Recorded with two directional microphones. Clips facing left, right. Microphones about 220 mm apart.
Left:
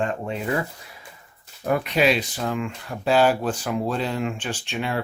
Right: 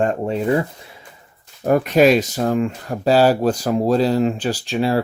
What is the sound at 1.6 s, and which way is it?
Speech, 40° right (ahead or behind).